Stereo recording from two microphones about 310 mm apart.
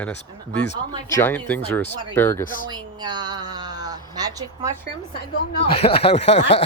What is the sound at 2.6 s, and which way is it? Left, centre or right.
A woman's voice, centre.